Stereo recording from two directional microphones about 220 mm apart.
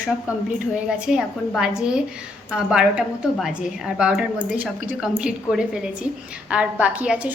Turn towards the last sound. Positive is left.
turn(degrees=-5)  # may be behind; listen again after turning